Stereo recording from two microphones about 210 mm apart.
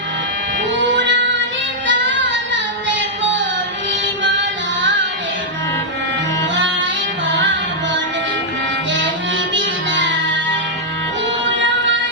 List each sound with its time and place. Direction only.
0.8 s music: 60° right (ahead or behind)
4.2 s music: 60° right (ahead or behind)
9.6 s music: 60° right (ahead or behind)